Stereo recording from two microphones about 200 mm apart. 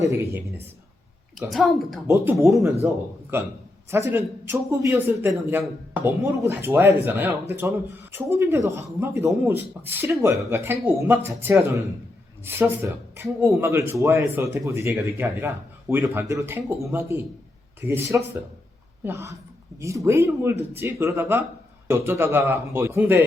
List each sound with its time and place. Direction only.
0.1 s speech: 15° right (ahead or behind)
1.4 s a woman's voice: centre (ahead or behind)
2.0 s a man's voice: 15° right (ahead or behind)